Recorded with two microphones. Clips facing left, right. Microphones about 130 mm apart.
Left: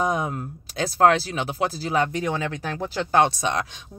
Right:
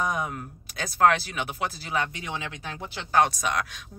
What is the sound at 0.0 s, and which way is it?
Speech, 30° left (ahead or behind).